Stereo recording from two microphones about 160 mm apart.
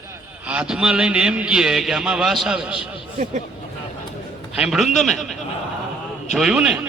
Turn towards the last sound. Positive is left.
turn(degrees=-5)  # may be behind; listen again after turning